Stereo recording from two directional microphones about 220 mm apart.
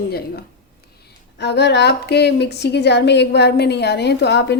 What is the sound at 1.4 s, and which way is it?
Speech, 50° left (ahead or behind).